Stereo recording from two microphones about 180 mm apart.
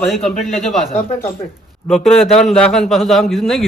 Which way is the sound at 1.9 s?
Centre (ahead or behind).